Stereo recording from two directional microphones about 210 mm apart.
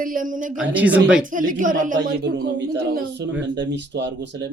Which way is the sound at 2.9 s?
55° right (ahead or behind).